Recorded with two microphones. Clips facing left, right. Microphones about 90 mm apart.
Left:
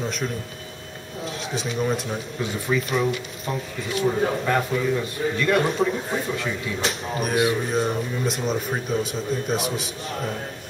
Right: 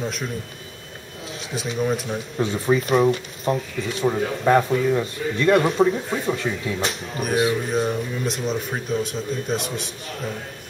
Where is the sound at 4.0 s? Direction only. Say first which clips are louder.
Even; 30° right (ahead or behind).